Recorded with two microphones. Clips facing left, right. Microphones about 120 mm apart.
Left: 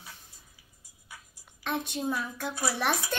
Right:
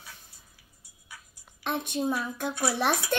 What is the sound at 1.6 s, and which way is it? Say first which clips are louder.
Speech: right 2 dB; 15° right (ahead or behind).